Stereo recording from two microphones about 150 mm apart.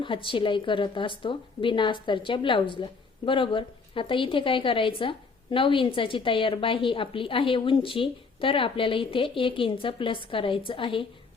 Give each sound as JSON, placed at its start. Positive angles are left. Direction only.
{"t": 0.0, "sound": "a woman's voice", "side_deg": 35}